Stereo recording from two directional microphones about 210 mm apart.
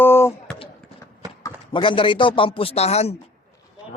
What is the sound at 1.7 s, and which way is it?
Speech, 25° left (ahead or behind).